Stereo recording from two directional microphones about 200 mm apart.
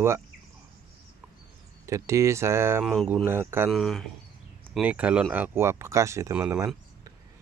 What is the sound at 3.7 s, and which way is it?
Speech, centre (ahead or behind).